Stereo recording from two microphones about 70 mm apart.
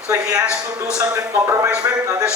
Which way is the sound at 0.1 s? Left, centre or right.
Right.